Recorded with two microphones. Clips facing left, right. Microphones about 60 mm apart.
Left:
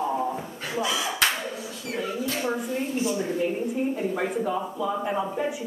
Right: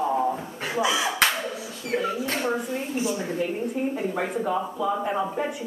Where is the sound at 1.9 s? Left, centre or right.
Right.